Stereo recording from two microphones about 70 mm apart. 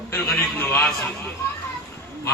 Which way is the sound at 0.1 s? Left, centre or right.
Left.